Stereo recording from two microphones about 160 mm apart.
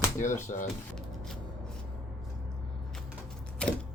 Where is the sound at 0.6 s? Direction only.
Centre (ahead or behind).